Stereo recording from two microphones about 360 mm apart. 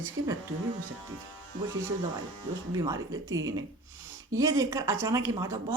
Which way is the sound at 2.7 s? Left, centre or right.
Centre.